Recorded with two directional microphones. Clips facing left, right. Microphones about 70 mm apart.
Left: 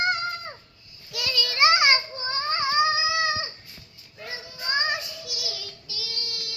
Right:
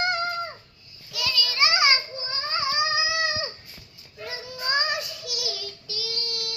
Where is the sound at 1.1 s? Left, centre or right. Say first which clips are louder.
Even; left.